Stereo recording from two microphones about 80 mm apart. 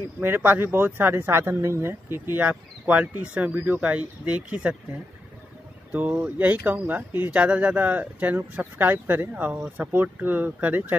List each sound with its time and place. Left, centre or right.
0.2 s speech: right
5.9 s speech: right